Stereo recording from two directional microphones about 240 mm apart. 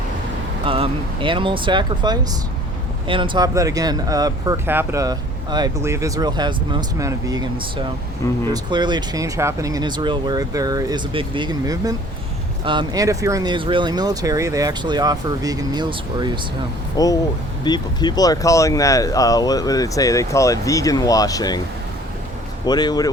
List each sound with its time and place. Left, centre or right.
0.6 s speech: right
17.0 s speech: centre
22.6 s speech: centre